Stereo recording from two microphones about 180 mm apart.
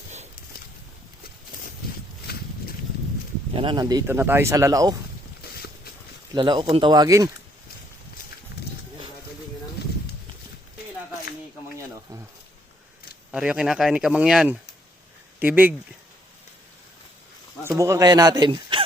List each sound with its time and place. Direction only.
2.3 s a sound: 60° left (ahead or behind)
3.5 s speech: 30° right (ahead or behind)
5.4 s boat: 60° left (ahead or behind)
6.3 s speech: 25° right (ahead or behind)
13.3 s speech: 5° right (ahead or behind)
17.7 s speech: 15° right (ahead or behind)